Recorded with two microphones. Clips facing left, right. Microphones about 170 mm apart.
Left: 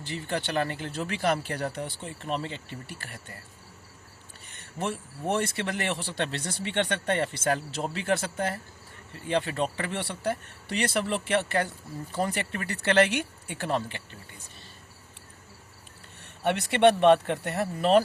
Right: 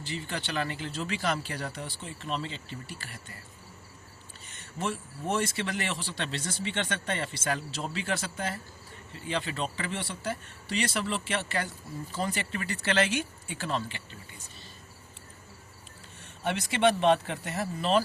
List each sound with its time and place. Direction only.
0.0 s speech: 55° left (ahead or behind)
4.8 s speech: 55° left (ahead or behind)
16.2 s speech: 60° left (ahead or behind)